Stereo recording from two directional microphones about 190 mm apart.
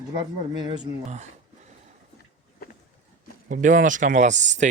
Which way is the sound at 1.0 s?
35° right (ahead or behind).